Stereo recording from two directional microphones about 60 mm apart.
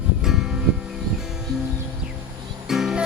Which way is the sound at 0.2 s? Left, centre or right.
Centre.